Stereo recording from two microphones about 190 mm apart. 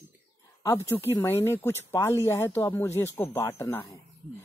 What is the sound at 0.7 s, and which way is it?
Speech, 15° left (ahead or behind).